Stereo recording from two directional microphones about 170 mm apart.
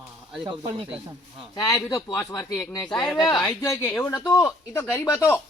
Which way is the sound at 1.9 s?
25° left (ahead or behind).